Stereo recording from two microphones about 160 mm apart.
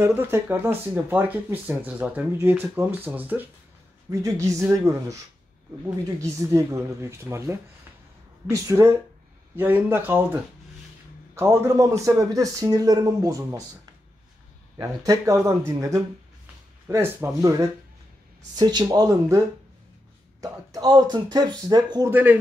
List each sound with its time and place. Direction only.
0.0 s speech: 15° right (ahead or behind)
14.8 s speech: 20° right (ahead or behind)
22.1 s speech: 10° right (ahead or behind)